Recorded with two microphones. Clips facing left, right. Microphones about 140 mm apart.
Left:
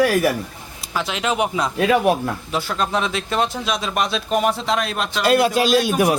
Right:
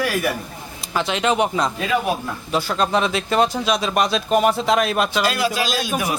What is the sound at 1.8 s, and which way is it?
Speech, 60° left (ahead or behind).